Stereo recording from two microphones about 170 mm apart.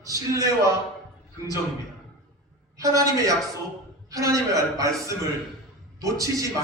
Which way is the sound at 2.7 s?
20° right (ahead or behind).